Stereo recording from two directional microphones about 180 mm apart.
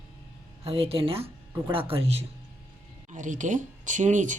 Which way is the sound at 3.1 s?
45° right (ahead or behind).